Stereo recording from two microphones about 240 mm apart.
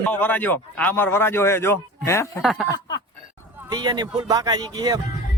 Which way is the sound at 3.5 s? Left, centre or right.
Centre.